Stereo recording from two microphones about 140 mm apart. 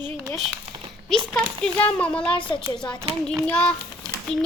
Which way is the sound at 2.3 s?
35° left (ahead or behind).